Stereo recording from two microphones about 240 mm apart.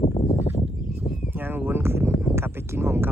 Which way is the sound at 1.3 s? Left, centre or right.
Centre.